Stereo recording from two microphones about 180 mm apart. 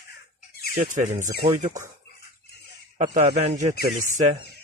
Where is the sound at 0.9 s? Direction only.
45° right (ahead or behind).